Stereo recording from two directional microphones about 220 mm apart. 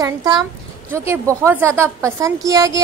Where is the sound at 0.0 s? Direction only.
15° right (ahead or behind).